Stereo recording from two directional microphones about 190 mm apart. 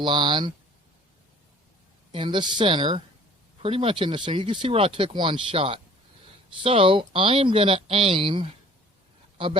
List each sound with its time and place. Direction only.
0.0 s speech: 25° right (ahead or behind)
2.1 s speech: 25° right (ahead or behind)